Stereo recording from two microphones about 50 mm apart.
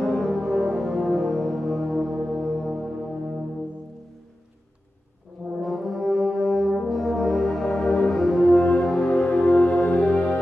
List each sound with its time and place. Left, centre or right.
0.0 s music: centre
5.6 s brass instrument: centre
8.1 s french horn: centre
9.0 s music: left